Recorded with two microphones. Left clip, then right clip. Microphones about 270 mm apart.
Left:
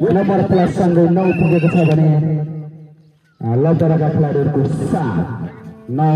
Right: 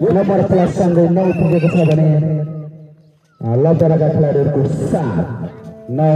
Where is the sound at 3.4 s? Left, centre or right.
Left.